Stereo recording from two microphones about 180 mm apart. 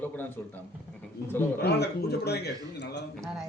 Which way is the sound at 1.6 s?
65° left (ahead or behind).